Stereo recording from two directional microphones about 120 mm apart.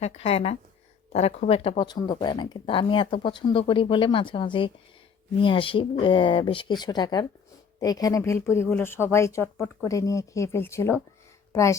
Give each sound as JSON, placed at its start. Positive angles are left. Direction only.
{"t": 0.0, "sound": "speech", "side_deg": 65}
{"t": 1.9, "sound": "speech", "side_deg": 35}